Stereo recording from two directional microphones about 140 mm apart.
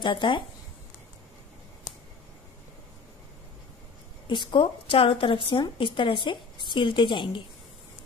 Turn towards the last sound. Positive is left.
turn(degrees=35)  # may be behind; listen again after turning